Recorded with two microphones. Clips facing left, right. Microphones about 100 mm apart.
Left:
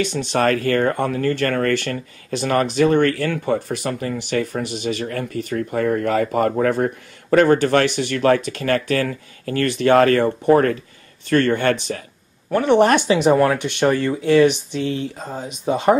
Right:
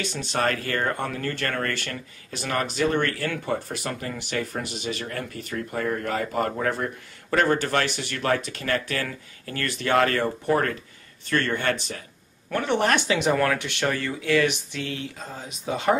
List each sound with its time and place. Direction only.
0.3 s speech: 55° left (ahead or behind)
10.2 s speech: 30° left (ahead or behind)
11.2 s speech: 55° left (ahead or behind)
12.6 s speech: 20° left (ahead or behind)